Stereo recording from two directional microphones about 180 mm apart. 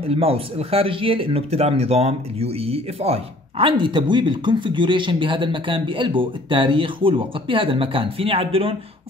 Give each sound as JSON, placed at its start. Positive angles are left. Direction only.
{"t": 0.1, "sound": "speech", "side_deg": -35}